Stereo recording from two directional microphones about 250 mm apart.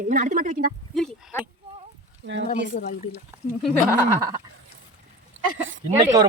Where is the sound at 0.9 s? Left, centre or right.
Centre.